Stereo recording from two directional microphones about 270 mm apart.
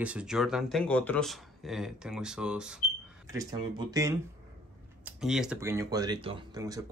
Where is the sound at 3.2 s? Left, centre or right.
Centre.